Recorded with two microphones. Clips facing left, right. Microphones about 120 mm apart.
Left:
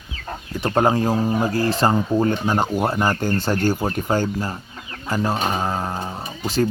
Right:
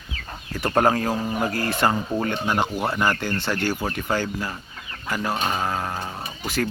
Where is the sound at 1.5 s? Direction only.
30° left (ahead or behind).